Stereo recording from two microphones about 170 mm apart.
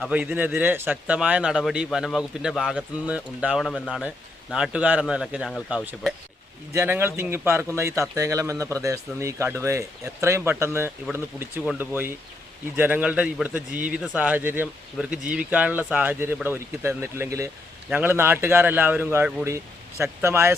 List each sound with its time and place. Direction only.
0.0 s speech: 10° right (ahead or behind)
3.7 s speech: 5° left (ahead or behind)
4.5 s a man's voice: 5° right (ahead or behind)